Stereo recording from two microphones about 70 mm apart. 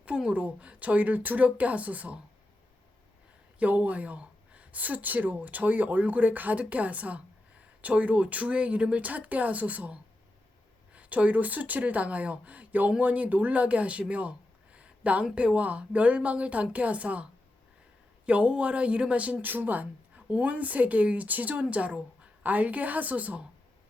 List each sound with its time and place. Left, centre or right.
0.0 s speech: centre
3.6 s speech: right
18.3 s speech: centre